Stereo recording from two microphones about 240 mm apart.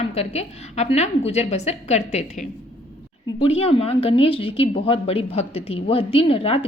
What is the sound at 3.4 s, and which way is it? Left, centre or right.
A woman's voice, left.